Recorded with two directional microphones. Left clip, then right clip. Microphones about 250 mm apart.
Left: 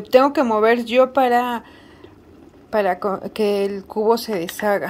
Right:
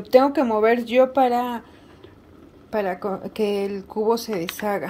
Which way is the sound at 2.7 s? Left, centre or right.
Centre.